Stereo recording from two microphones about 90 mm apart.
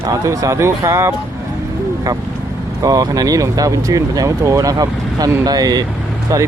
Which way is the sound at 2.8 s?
45° right (ahead or behind).